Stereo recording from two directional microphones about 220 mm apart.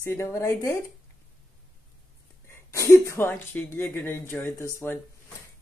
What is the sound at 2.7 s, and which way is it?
Speech, 10° left (ahead or behind).